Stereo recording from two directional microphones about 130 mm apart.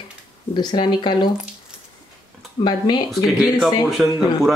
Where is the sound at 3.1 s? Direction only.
Centre (ahead or behind).